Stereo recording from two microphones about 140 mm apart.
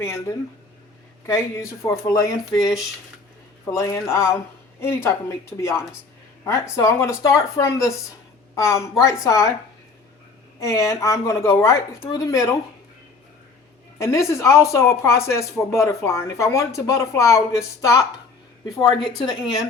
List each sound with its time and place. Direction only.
1.3 s speech: 20° left (ahead or behind)
10.6 s speech: 20° left (ahead or behind)
14.0 s a woman's voice: 20° left (ahead or behind)